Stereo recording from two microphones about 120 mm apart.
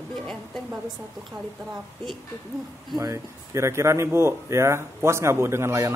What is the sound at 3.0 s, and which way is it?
Speech, 25° right (ahead or behind).